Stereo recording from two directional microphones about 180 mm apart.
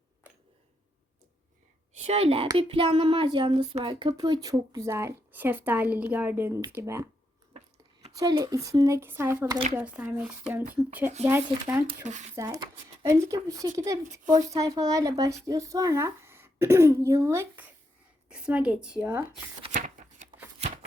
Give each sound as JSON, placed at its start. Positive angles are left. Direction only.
{"t": 2.0, "sound": "a woman's voice", "side_deg": -35}
{"t": 8.1, "sound": "speech", "side_deg": -20}
{"t": 12.0, "sound": "a woman's voice", "side_deg": -40}
{"t": 12.4, "sound": "speech", "side_deg": -20}
{"t": 19.7, "sound": "shuffling cards", "side_deg": -45}